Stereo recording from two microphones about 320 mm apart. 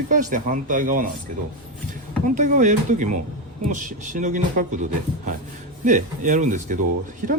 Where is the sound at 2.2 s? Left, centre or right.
Right.